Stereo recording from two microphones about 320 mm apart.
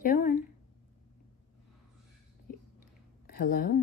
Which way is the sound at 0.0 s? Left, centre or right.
Left.